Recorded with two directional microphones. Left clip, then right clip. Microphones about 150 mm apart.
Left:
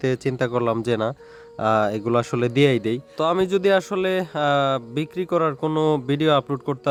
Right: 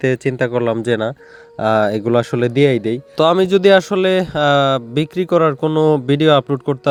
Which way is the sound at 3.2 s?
40° right (ahead or behind).